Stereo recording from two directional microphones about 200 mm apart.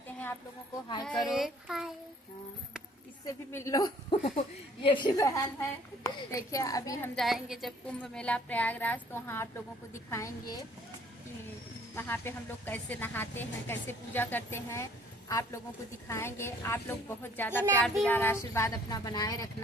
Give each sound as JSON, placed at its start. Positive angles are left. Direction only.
{"t": 1.0, "sound": "a child's voice", "side_deg": 0}
{"t": 3.5, "sound": "a woman's voice", "side_deg": 15}
{"t": 7.2, "sound": "a woman's voice", "side_deg": 0}
{"t": 11.9, "sound": "a woman's voice", "side_deg": 10}